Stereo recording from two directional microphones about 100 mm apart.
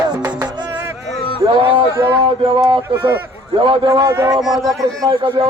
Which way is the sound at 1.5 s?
60° right (ahead or behind).